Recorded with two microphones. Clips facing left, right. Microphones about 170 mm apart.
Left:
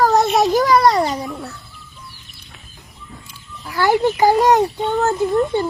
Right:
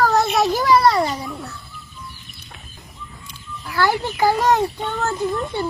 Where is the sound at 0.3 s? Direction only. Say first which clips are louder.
Left 2 dB; 20° left (ahead or behind).